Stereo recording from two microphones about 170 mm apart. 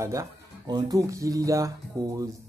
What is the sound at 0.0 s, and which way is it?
Speech, 20° right (ahead or behind).